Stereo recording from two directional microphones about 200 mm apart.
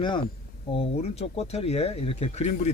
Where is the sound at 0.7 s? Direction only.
30° left (ahead or behind).